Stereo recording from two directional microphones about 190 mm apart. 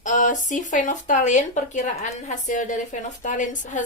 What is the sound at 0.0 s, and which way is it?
Speech, 40° left (ahead or behind).